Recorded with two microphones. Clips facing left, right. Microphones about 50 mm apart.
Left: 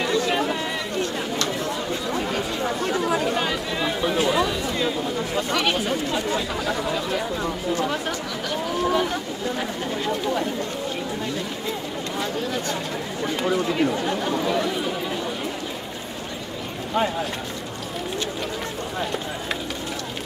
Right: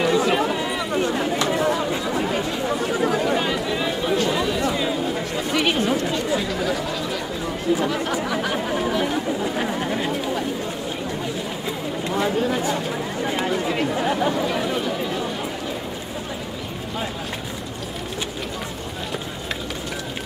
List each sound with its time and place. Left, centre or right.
0.0 s chatter: centre
0.9 s chatter: centre
8.3 s a sound: right
9.4 s chatter: centre
12.1 s a sound: centre
13.4 s chatter: centre